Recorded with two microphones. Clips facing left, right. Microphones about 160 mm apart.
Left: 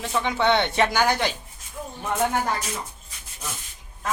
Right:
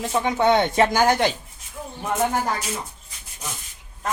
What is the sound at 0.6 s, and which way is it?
Speech, 40° right (ahead or behind).